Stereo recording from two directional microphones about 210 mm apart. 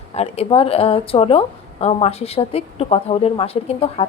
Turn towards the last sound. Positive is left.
turn(degrees=30)  # may be behind; listen again after turning